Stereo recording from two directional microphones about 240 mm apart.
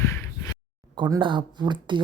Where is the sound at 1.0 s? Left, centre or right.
Centre.